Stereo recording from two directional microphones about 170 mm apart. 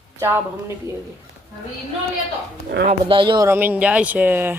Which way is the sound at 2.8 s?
30° right (ahead or behind).